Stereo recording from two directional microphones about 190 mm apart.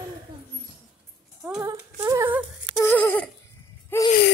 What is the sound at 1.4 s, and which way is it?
Speech, 15° right (ahead or behind).